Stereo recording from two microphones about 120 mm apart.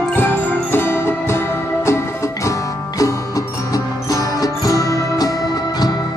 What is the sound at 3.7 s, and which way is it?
Music, 30° left (ahead or behind).